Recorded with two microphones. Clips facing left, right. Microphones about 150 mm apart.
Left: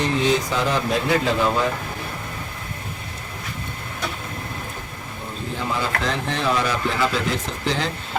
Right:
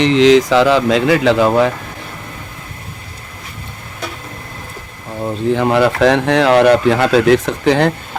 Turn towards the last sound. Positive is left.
turn(degrees=-65)  # may be behind; listen again after turning